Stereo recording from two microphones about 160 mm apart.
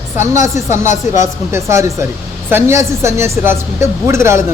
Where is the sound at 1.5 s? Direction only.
15° right (ahead or behind).